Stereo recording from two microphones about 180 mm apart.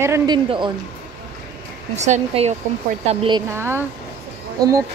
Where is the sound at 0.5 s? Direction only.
25° right (ahead or behind).